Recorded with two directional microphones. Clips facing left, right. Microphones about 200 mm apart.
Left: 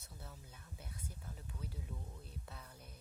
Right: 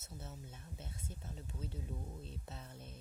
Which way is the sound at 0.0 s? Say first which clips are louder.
Right 5 dB; 25° right (ahead or behind).